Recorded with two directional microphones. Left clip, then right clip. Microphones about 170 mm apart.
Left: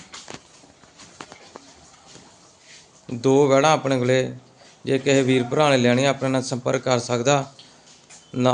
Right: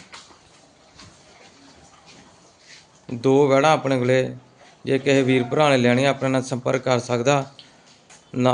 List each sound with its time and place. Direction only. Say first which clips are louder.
3.1 s a man's voice: even; 5° left (ahead or behind)